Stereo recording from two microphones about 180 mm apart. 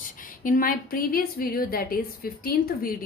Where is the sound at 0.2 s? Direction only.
50° left (ahead or behind).